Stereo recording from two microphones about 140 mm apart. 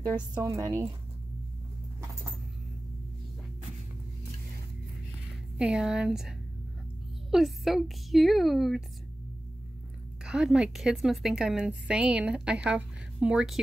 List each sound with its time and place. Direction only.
0.4 s a woman's voice: 20° right (ahead or behind)
5.6 s a woman's voice: 5° right (ahead or behind)
10.2 s a woman's voice: 5° right (ahead or behind)